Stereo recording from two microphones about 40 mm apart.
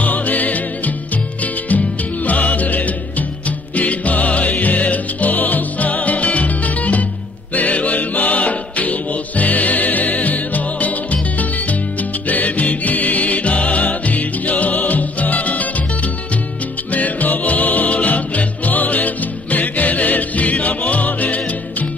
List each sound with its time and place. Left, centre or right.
0.0 s music: left